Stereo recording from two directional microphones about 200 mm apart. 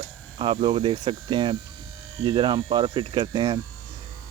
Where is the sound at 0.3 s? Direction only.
25° right (ahead or behind).